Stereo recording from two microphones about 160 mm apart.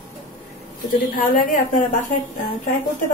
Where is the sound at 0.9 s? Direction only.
60° left (ahead or behind).